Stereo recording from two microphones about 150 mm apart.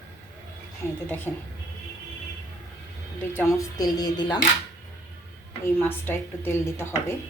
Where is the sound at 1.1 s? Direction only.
15° left (ahead or behind).